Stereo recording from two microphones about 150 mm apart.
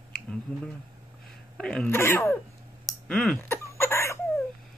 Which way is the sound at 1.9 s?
15° left (ahead or behind).